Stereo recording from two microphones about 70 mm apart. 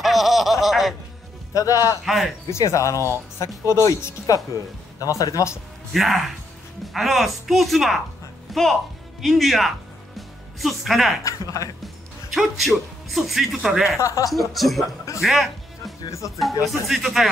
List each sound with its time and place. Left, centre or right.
0.0 s a sound: centre
1.5 s a man's voice: left
2.0 s a man's voice: centre
2.5 s speech: left
5.9 s a man's voice: centre
10.1 s music: centre
11.2 s speech: left
12.3 s a man's voice: centre
13.8 s speech: left
14.3 s a man's voice: centre